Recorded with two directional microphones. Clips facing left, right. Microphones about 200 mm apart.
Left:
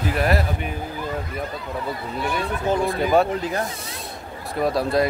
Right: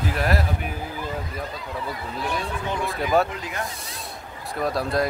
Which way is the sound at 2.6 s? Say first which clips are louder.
Left 10 dB; 40° left (ahead or behind).